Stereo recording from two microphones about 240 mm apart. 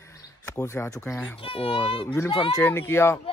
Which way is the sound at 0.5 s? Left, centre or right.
Centre.